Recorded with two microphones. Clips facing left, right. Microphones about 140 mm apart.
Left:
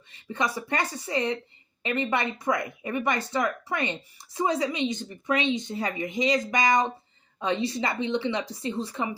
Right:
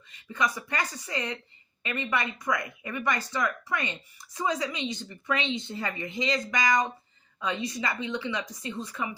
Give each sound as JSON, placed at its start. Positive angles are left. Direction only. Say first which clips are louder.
{"t": 0.1, "sound": "speech", "louder": "left 1 dB", "side_deg": 25}